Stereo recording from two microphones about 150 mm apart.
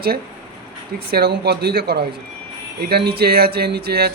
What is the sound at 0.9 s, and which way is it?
Music, 90° right.